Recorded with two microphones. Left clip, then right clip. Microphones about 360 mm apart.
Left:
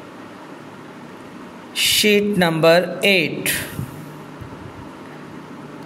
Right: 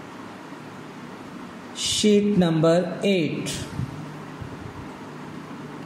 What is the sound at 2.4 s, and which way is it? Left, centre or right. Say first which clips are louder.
A man's voice: left 6 dB; left.